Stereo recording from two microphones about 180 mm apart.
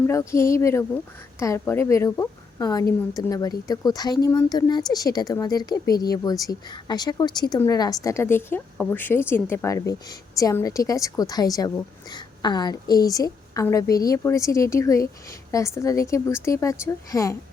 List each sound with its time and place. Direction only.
0.1 s a woman's voice: 15° left (ahead or behind)